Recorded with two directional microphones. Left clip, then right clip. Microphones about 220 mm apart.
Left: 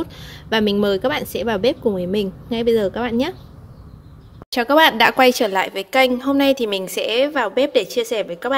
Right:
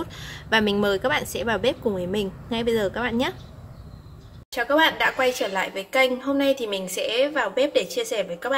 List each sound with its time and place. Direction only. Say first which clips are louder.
0.0 s speech: left 4 dB; 20° left (ahead or behind)
4.5 s a woman's voice: left 6 dB; 45° left (ahead or behind)